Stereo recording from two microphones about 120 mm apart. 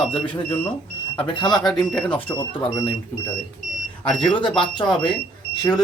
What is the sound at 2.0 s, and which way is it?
Speech, 40° left (ahead or behind).